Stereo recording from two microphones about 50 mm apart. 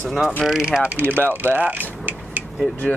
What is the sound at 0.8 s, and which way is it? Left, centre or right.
Speech, right.